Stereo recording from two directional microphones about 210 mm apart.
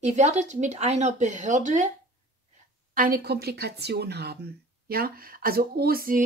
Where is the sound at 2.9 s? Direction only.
45° right (ahead or behind).